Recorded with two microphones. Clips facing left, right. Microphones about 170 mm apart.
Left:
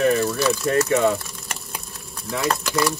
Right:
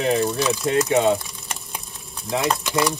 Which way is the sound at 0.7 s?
20° right (ahead or behind).